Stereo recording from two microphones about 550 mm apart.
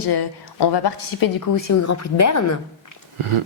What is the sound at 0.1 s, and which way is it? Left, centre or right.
A woman's voice, left.